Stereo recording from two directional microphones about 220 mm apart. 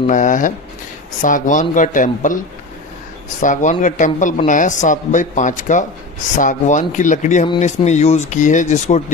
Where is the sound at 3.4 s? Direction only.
35° left (ahead or behind).